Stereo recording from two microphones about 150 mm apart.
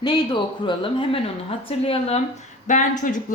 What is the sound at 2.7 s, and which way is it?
Speech, 60° left (ahead or behind).